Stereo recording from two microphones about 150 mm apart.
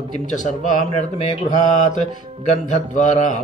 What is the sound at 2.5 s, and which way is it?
Speech, 55° left (ahead or behind).